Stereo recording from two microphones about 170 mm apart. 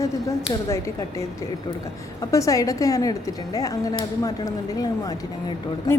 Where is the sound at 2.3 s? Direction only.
20° left (ahead or behind).